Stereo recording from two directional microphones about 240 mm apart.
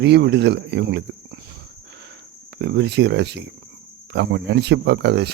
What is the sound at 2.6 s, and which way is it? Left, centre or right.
Speech, right.